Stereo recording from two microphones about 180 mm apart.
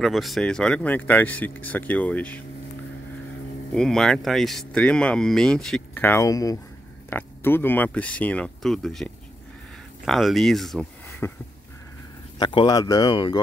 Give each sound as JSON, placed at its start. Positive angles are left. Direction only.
{"t": 0.0, "sound": "speech", "side_deg": 0}
{"t": 3.7, "sound": "speech", "side_deg": 5}
{"t": 12.4, "sound": "speech", "side_deg": 25}